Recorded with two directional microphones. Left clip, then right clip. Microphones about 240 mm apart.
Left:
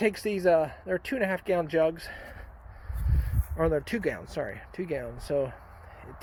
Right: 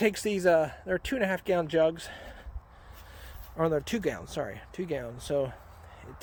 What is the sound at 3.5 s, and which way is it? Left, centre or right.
Speech, centre.